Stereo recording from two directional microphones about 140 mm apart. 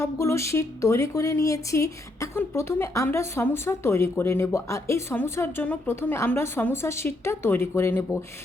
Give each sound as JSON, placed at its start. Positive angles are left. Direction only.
{"t": 0.0, "sound": "speech", "side_deg": 20}